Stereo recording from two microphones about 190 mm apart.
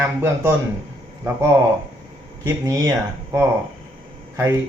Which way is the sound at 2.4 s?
20° right (ahead or behind).